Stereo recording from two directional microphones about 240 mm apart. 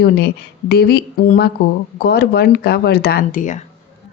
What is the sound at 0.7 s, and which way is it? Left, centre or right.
A woman's voice, left.